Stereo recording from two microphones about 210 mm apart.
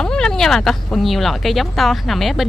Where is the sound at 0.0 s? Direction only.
5° left (ahead or behind).